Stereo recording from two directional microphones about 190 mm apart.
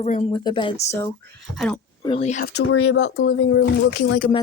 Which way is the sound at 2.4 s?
60° left (ahead or behind).